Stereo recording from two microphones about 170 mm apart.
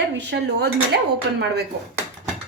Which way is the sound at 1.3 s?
90° right.